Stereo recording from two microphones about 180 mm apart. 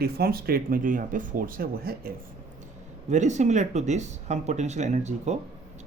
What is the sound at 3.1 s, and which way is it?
Speech, 40° right (ahead or behind).